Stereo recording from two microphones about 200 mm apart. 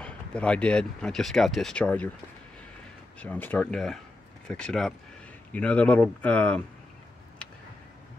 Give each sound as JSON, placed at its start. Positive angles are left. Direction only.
{"t": 0.0, "sound": "speech", "side_deg": 5}
{"t": 3.2, "sound": "speech", "side_deg": 10}